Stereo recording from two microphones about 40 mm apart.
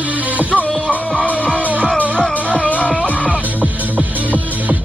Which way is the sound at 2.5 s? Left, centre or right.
Left.